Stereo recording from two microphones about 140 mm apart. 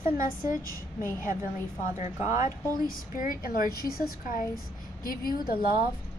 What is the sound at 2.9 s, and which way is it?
A woman's voice, 85° left.